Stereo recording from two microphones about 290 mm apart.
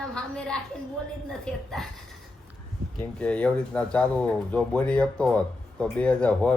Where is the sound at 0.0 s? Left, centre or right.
Centre.